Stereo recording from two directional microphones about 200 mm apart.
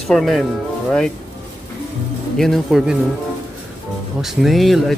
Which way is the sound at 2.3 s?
Centre (ahead or behind).